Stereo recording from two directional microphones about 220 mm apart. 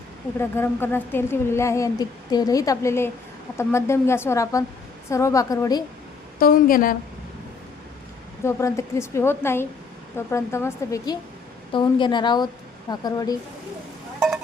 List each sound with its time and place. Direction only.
0.3 s speech: 10° left (ahead or behind)
6.4 s a woman's voice: 40° left (ahead or behind)
8.4 s a woman's voice: 15° left (ahead or behind)